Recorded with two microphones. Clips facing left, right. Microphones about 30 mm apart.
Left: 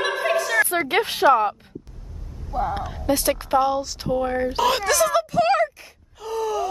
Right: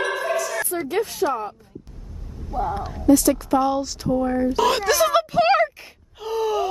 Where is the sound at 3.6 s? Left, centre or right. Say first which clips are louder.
Even; centre.